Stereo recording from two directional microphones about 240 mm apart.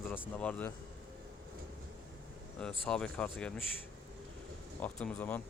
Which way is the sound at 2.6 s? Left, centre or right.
Centre.